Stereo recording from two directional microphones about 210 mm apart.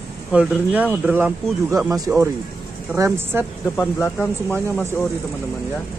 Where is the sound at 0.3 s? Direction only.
5° right (ahead or behind).